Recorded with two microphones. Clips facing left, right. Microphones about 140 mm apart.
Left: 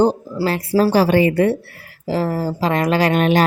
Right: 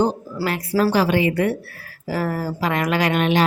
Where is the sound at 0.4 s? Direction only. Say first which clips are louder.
Left 3 dB; 30° left (ahead or behind).